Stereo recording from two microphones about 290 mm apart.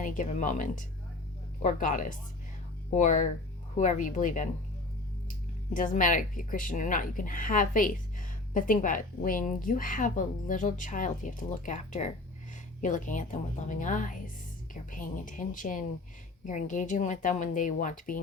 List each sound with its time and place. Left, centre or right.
0.0 s a woman's voice: left
5.7 s a woman's voice: left